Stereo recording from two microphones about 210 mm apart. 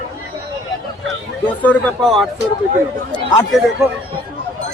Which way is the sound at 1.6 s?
5° left (ahead or behind).